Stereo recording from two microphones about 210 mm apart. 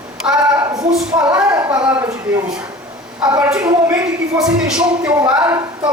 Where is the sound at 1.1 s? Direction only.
15° right (ahead or behind).